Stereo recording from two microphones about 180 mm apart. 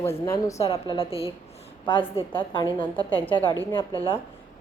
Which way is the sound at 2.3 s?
30° left (ahead or behind).